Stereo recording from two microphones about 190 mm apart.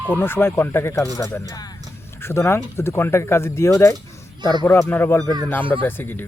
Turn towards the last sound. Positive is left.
turn(degrees=10)  # may be behind; listen again after turning